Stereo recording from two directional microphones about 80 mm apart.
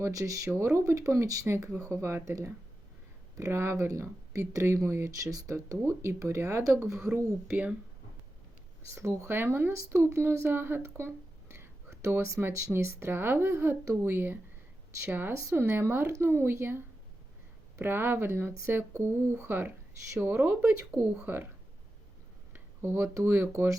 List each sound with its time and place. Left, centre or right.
0.0 s speech: right
7.4 s speech: centre
9.0 s a woman's voice: right
15.4 s speech: right
15.7 s a woman's voice: right
22.5 s speech: right
23.5 s speech: right